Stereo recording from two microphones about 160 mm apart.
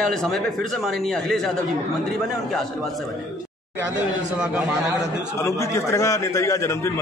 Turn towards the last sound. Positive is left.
turn(degrees=15)  # may be behind; listen again after turning